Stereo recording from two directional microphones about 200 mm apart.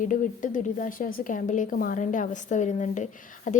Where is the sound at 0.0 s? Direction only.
40° left (ahead or behind).